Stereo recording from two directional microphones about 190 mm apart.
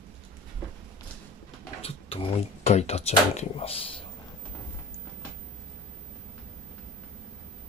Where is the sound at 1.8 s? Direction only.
30° left (ahead or behind).